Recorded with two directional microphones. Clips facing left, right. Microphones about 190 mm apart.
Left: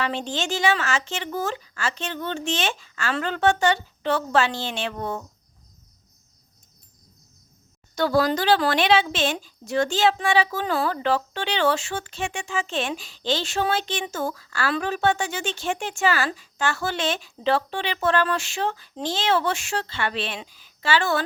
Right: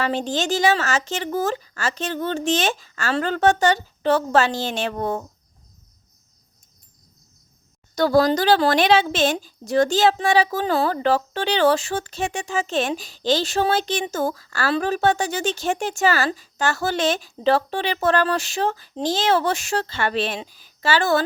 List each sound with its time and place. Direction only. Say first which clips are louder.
0.0 s a woman's voice: right 4 dB; 40° right (ahead or behind)
7.9 s a woman's voice: right 4 dB; 40° right (ahead or behind)